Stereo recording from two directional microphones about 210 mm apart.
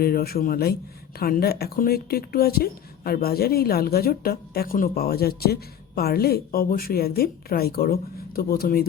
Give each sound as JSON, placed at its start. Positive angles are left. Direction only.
{"t": 0.0, "sound": "speech", "side_deg": 45}